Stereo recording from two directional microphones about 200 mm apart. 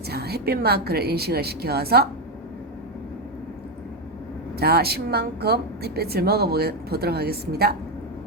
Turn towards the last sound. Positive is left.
turn(degrees=-50)  # may be behind; listen again after turning